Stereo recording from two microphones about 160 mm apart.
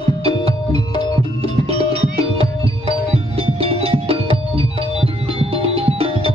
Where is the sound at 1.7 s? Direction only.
35° right (ahead or behind).